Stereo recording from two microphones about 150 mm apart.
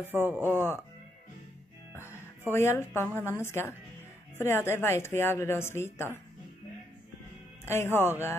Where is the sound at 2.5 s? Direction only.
15° left (ahead or behind).